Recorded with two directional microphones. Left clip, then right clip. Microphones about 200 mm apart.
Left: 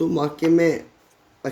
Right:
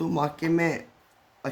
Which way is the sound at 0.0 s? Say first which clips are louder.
Left 6 dB; 25° right (ahead or behind).